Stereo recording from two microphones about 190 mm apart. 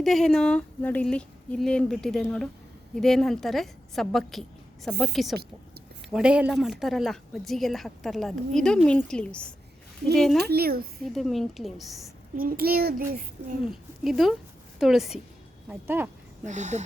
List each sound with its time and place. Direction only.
0.0 s a woman's voice: centre (ahead or behind)
10.3 s speech: 55° right (ahead or behind)
11.0 s a woman's voice: centre (ahead or behind)
12.4 s a child's voice: 50° right (ahead or behind)
13.7 s a woman's voice: centre (ahead or behind)
16.5 s speech: 40° right (ahead or behind)